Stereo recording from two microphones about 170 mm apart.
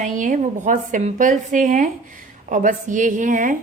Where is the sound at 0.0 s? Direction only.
50° right (ahead or behind).